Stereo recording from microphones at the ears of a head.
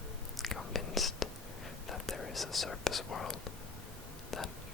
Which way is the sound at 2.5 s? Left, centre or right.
Left.